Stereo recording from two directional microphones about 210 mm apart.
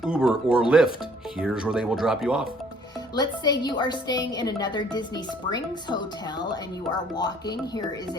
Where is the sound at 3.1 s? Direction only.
20° left (ahead or behind).